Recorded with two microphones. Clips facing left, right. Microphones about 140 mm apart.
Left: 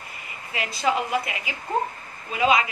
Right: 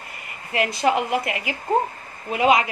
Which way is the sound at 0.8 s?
70° right (ahead or behind).